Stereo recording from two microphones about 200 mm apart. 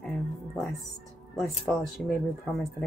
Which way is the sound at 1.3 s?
Centre (ahead or behind).